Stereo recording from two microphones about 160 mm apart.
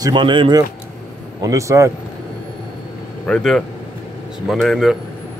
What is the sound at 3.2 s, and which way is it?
Speech, 5° left (ahead or behind).